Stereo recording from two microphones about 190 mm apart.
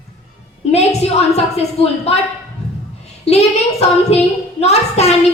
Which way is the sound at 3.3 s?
35° left (ahead or behind).